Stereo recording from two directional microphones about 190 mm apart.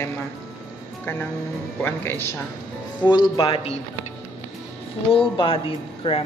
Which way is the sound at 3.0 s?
25° left (ahead or behind).